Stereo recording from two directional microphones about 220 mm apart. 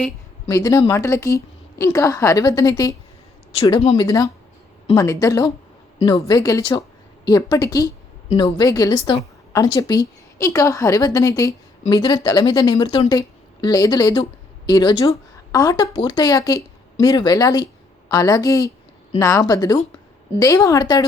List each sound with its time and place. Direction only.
0.4 s a woman's voice: 15° left (ahead or behind)
3.5 s a woman's voice: 25° left (ahead or behind)